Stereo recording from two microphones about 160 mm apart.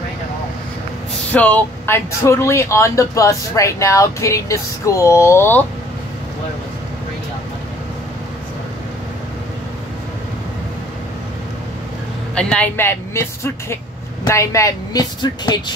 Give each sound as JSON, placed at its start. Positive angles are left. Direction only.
{"t": 1.3, "sound": "speech", "side_deg": 10}
{"t": 12.4, "sound": "speech", "side_deg": 5}